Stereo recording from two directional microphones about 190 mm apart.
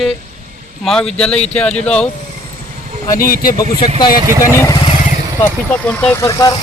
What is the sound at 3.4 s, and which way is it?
Speech, 20° left (ahead or behind).